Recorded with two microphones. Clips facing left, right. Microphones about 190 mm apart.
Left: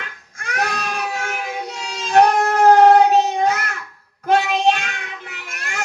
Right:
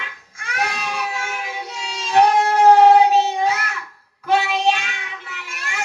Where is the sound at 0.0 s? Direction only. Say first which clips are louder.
Left 2 dB; 50° left (ahead or behind).